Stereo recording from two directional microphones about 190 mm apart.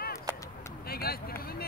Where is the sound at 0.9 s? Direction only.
55° left (ahead or behind).